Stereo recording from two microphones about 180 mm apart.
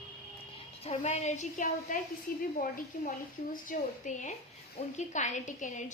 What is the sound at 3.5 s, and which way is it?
A woman's voice, 45° left (ahead or behind).